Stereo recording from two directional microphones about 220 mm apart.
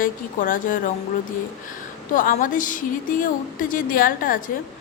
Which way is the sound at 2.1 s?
40° left (ahead or behind).